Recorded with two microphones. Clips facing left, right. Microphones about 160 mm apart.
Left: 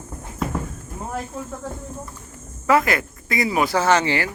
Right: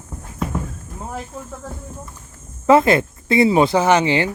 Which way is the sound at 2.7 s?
25° right (ahead or behind).